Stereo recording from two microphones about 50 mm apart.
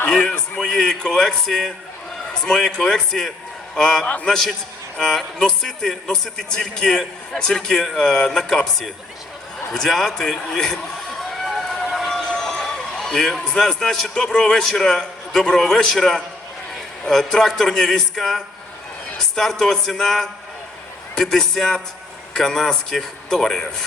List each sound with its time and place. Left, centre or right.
0.3 s music: centre
2.3 s a man's voice: centre
4.0 s a man's voice: left
4.3 s a man's voice: centre
9.7 s a sound: centre
12.2 s a man's voice: centre